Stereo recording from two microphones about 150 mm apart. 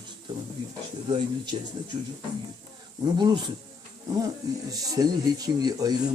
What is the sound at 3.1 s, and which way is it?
Speech, 30° right (ahead or behind).